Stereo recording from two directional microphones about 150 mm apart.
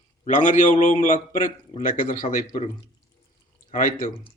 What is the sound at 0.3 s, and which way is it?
A man's voice, 55° left (ahead or behind).